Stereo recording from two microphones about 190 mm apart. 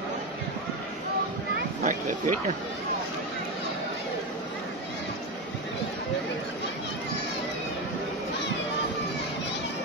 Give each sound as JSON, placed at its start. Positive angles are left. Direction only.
{"t": 1.8, "sound": "speech", "side_deg": -40}